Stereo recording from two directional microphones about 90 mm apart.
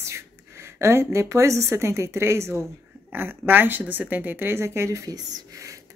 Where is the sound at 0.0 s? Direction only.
30° right (ahead or behind).